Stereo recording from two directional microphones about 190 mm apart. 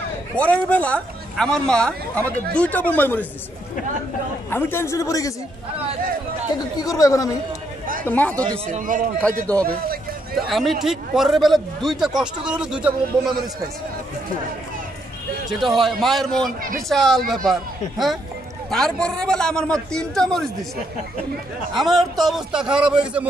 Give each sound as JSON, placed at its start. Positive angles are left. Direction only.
{"t": 0.4, "sound": "speech", "side_deg": 10}
{"t": 4.5, "sound": "speech", "side_deg": 10}
{"t": 6.8, "sound": "speech", "side_deg": 20}
{"t": 8.6, "sound": "a man's voice", "side_deg": -45}
{"t": 9.2, "sound": "a man's voice", "side_deg": 5}
{"t": 15.6, "sound": "a man's voice", "side_deg": 0}
{"t": 21.7, "sound": "a man's voice", "side_deg": 0}